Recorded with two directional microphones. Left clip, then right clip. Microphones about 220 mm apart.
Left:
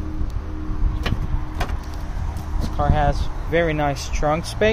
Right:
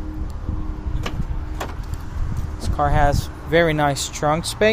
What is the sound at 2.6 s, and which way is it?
Speech, 45° right (ahead or behind).